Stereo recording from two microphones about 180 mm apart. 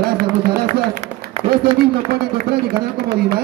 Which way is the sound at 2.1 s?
60° right (ahead or behind).